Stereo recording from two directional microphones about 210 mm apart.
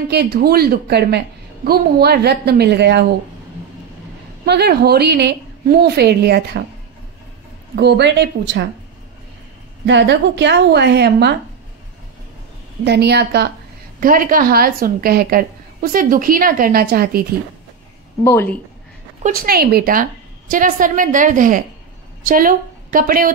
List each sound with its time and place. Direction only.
0.1 s a woman's voice: 50° right (ahead or behind)
4.5 s a woman's voice: 50° right (ahead or behind)
7.7 s a woman's voice: 55° right (ahead or behind)
9.8 s a woman's voice: 55° right (ahead or behind)
12.8 s a woman's voice: 55° right (ahead or behind)
13.9 s a woman's voice: 40° right (ahead or behind)
18.2 s speech: 10° left (ahead or behind)
19.2 s a woman's voice: 45° right (ahead or behind)